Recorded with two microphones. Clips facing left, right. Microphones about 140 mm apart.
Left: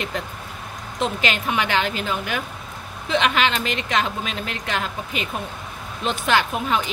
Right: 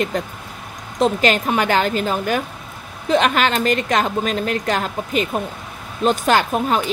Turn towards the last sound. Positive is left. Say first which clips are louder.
# right 4 dB
turn(degrees=-40)  # may be behind; listen again after turning